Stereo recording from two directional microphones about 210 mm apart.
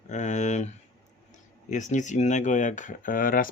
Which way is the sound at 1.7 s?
35° left (ahead or behind).